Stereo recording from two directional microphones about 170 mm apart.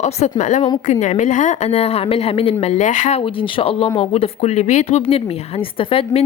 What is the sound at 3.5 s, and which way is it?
A woman's voice, 30° left (ahead or behind).